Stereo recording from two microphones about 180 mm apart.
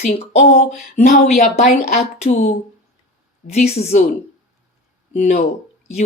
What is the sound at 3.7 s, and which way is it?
Speech, 40° left (ahead or behind).